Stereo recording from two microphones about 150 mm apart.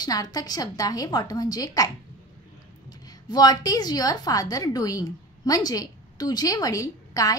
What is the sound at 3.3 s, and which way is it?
A woman's voice, 25° left (ahead or behind).